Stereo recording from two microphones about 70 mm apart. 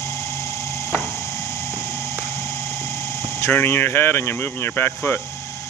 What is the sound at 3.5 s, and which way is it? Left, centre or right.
Speech, left.